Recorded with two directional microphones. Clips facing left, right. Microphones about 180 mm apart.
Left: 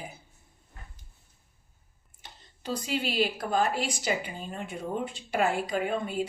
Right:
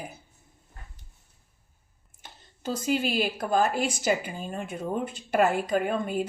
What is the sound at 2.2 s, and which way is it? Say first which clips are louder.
Speech: right 3 dB; 45° right (ahead or behind).